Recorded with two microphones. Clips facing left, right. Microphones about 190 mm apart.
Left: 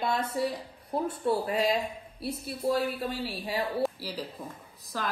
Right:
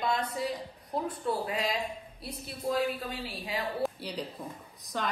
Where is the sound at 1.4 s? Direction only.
30° left (ahead or behind).